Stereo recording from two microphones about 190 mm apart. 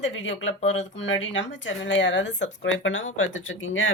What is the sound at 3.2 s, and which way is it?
Speech, 90° left.